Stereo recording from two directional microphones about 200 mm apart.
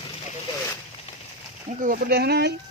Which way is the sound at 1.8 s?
45° right (ahead or behind).